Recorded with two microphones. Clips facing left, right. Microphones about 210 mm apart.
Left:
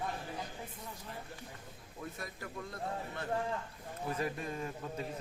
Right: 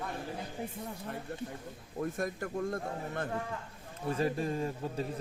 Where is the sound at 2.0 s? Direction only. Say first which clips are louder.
Right 10 dB; 50° right (ahead or behind).